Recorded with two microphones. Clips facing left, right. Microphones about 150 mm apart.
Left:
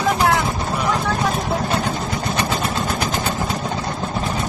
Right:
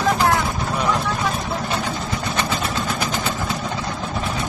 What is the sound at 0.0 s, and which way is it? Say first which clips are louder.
Vehicle: left 1 dB; 10° left (ahead or behind).